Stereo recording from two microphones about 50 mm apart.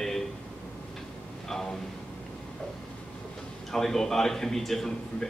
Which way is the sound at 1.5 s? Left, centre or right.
Centre.